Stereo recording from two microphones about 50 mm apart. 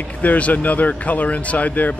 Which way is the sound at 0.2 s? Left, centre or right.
Left.